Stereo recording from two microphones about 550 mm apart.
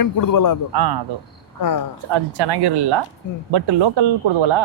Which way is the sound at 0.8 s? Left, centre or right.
Right.